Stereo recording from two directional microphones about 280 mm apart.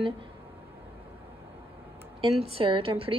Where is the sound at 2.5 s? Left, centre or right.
Centre.